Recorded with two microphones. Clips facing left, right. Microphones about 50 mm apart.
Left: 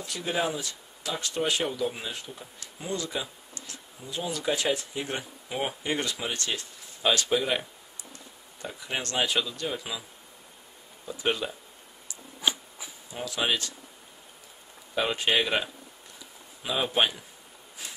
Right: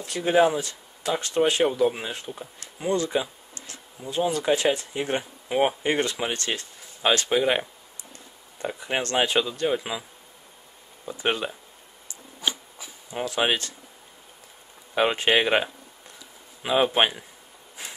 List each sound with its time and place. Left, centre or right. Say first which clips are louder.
0.0 s speech: right 9 dB; right
8.6 s speech: right 6 dB; right
11.1 s speech: right 2 dB; right
12.4 s a sound: even; centre
13.1 s speech: right 4 dB; right
15.0 s speech: right 5 dB; right